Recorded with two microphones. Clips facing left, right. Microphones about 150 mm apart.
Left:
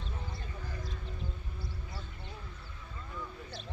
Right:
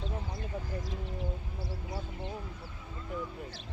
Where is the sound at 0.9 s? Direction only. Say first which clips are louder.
Right 6 dB; 90° right.